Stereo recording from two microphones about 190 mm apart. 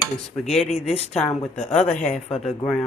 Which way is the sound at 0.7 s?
35° left (ahead or behind).